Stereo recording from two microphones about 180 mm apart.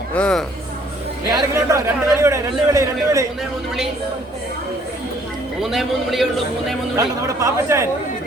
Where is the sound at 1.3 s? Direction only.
15° right (ahead or behind).